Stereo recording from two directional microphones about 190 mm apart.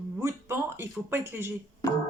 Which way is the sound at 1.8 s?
15° left (ahead or behind).